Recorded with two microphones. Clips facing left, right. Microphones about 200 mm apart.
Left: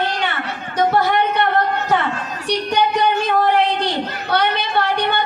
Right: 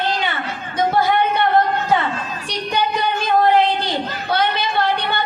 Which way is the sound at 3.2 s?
70° left (ahead or behind).